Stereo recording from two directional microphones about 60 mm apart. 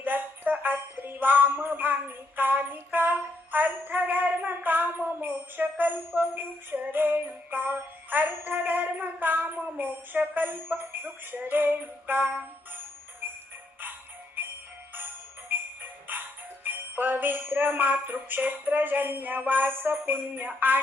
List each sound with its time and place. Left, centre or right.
0.0 s music: right
14.4 s music: right
16.6 s jingle bell: right
18.3 s music: right